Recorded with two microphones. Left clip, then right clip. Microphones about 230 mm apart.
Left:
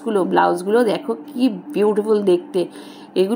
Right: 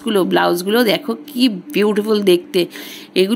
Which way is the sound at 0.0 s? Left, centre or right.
Right.